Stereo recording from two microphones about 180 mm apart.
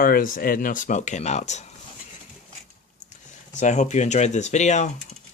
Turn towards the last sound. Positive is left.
turn(degrees=40)  # may be behind; listen again after turning